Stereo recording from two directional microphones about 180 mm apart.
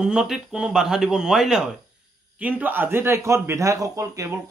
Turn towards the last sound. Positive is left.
turn(degrees=-15)  # may be behind; listen again after turning